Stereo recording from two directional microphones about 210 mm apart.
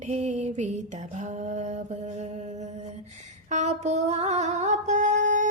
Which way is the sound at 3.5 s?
30° right (ahead or behind).